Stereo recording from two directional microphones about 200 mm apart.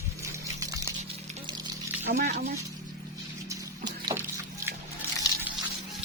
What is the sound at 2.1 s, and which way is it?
Speech, 50° right (ahead or behind).